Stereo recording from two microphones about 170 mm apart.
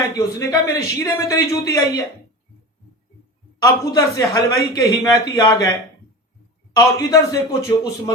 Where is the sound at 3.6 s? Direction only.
20° left (ahead or behind).